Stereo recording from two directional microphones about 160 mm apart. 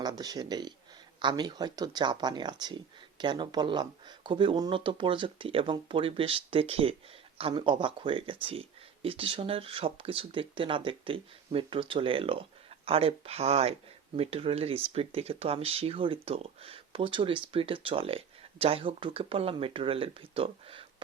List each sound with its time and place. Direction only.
0.0 s speech: 25° right (ahead or behind)